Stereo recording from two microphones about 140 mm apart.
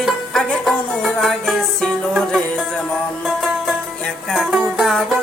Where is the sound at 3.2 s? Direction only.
5° right (ahead or behind).